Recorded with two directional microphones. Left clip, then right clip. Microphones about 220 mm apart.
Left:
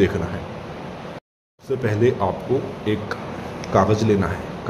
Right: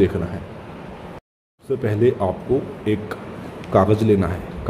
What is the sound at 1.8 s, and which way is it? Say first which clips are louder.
Speech: right 1 dB; 10° right (ahead or behind).